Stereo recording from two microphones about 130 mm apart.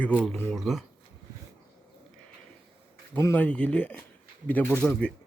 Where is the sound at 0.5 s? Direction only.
Centre (ahead or behind).